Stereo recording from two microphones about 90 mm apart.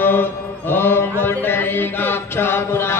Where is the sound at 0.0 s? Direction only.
25° left (ahead or behind).